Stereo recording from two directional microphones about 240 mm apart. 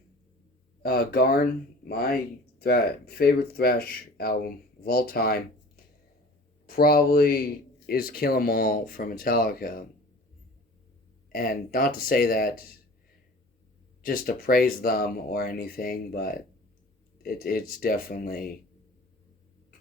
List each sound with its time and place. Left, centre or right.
0.8 s speech: left
11.3 s speech: left
14.0 s speech: left